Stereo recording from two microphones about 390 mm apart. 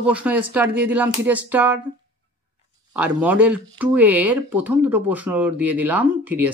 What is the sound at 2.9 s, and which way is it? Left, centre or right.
Speech, centre.